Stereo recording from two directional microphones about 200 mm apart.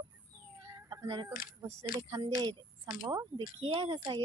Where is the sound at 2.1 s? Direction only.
20° right (ahead or behind).